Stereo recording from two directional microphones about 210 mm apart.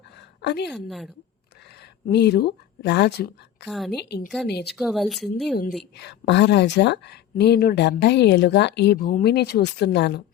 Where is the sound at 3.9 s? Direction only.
55° left (ahead or behind).